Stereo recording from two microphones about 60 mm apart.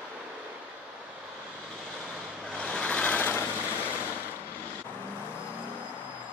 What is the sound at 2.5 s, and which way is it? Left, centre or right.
Vehicle, centre.